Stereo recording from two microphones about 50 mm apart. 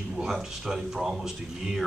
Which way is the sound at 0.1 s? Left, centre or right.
Centre.